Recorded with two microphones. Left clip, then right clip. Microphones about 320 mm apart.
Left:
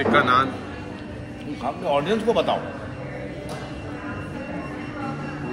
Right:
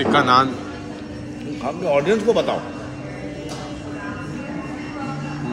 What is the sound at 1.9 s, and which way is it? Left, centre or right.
Speech, centre.